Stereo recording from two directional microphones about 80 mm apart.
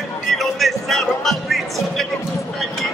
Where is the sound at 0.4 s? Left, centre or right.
Centre.